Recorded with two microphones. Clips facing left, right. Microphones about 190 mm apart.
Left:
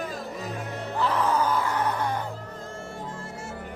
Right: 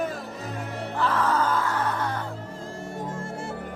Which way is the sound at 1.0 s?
15° left (ahead or behind).